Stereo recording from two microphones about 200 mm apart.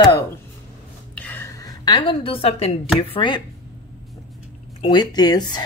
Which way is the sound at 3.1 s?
25° left (ahead or behind).